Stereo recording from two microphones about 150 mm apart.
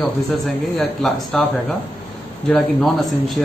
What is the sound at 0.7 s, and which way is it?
Speech, 5° left (ahead or behind).